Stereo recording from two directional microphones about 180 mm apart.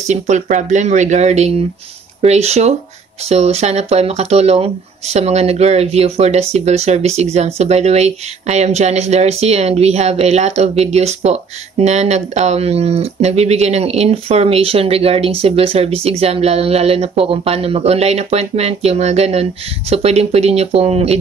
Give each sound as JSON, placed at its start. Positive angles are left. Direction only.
{"t": 0.1, "sound": "speech", "side_deg": -40}